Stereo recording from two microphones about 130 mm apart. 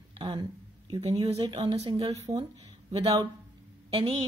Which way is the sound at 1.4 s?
30° right (ahead or behind).